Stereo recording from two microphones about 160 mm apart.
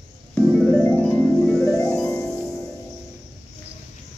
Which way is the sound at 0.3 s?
10° left (ahead or behind).